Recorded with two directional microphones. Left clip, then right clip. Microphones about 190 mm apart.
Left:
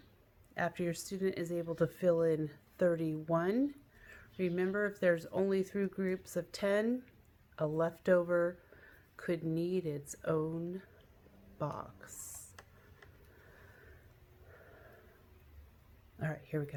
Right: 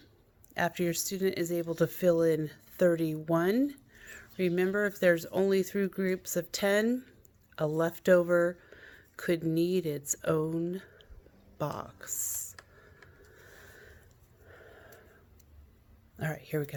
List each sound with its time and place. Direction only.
0.5 s speech: 50° right (ahead or behind)
16.1 s speech: 50° right (ahead or behind)